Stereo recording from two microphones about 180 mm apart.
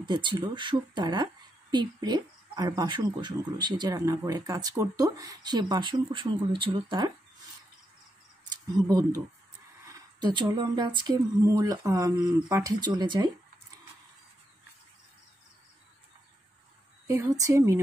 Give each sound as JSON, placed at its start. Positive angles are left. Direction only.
{"t": 0.0, "sound": "a woman's voice", "side_deg": -25}
{"t": 8.7, "sound": "a woman's voice", "side_deg": -20}
{"t": 10.2, "sound": "a woman's voice", "side_deg": -25}
{"t": 17.1, "sound": "a woman's voice", "side_deg": -15}